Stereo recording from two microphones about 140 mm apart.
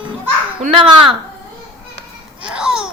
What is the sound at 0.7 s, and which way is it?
Speech, 40° right (ahead or behind).